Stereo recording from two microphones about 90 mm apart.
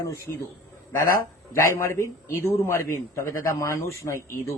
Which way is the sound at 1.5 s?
35° left (ahead or behind).